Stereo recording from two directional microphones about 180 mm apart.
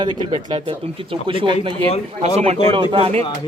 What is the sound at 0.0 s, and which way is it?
Speech, 25° right (ahead or behind).